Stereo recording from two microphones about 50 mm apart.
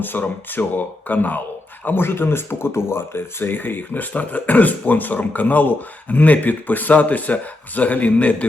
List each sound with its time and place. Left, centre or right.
0.0 s speech: left